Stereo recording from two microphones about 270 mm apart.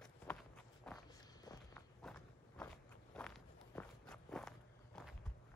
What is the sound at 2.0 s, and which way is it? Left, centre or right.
Walk, centre.